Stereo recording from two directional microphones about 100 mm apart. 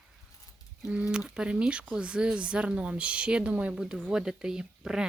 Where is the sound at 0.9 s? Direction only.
10° right (ahead or behind).